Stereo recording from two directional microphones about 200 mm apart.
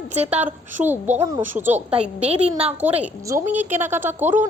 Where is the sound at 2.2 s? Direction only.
30° right (ahead or behind).